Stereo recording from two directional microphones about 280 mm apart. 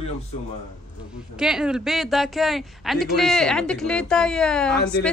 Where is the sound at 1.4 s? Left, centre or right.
Centre.